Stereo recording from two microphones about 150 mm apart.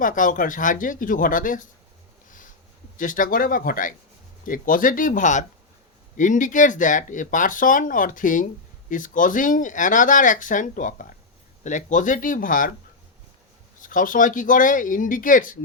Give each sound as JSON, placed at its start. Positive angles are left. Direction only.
{"t": 0.0, "sound": "speech", "side_deg": 60}
{"t": 3.0, "sound": "speech", "side_deg": 65}
{"t": 13.8, "sound": "speech", "side_deg": 65}